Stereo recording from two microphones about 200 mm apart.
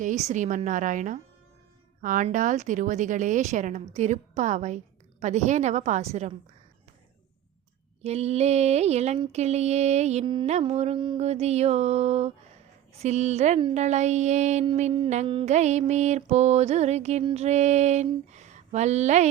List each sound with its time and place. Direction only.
0.0 s a woman's voice: 35° right (ahead or behind)
8.0 s a woman's voice: 30° right (ahead or behind)